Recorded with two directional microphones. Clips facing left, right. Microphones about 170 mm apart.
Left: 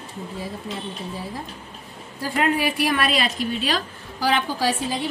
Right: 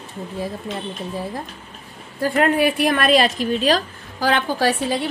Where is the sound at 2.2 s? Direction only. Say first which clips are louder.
Right 5 dB; 55° right (ahead or behind).